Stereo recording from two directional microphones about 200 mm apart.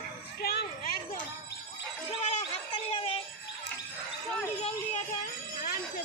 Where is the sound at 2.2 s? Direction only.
30° left (ahead or behind).